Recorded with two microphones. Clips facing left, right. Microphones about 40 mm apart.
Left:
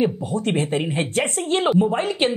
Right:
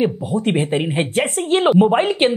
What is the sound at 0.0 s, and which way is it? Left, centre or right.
Speech, centre.